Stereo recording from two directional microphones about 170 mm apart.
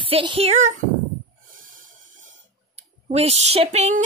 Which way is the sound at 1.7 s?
50° right (ahead or behind).